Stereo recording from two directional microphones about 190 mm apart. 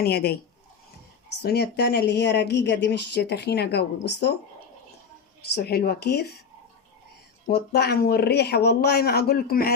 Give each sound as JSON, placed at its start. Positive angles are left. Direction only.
{"t": 0.0, "sound": "speech", "side_deg": 55}
{"t": 1.4, "sound": "speech", "side_deg": 55}
{"t": 5.5, "sound": "speech", "side_deg": 55}
{"t": 7.4, "sound": "speech", "side_deg": 60}